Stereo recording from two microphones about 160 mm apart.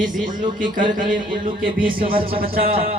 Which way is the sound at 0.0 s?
55° right (ahead or behind).